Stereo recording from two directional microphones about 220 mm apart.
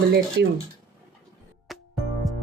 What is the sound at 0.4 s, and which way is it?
Speech, 50° right (ahead or behind).